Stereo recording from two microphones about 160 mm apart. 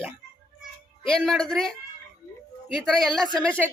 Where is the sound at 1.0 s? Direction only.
5° left (ahead or behind).